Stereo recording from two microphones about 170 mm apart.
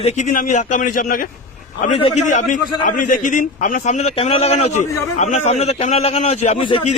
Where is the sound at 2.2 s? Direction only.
50° left (ahead or behind).